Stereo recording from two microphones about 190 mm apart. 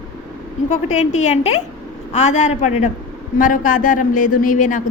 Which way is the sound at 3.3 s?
45° left (ahead or behind).